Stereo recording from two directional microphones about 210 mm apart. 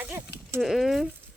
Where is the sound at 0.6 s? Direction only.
Centre (ahead or behind).